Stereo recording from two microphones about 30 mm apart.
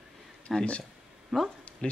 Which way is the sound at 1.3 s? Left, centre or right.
Centre.